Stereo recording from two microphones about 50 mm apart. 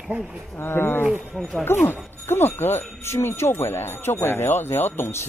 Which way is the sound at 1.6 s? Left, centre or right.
Left.